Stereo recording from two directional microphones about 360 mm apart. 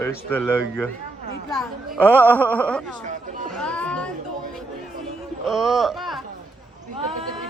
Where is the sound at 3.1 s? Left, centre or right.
Right.